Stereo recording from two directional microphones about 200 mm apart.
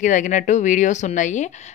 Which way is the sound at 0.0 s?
40° left (ahead or behind).